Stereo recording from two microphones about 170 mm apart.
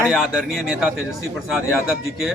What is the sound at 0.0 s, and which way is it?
Speech, centre (ahead or behind).